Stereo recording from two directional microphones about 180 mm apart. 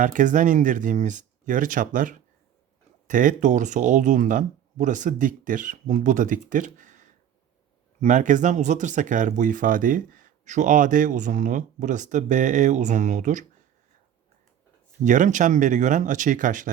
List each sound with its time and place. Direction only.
0.0 s speech: 45° right (ahead or behind)
15.0 s speech: 45° right (ahead or behind)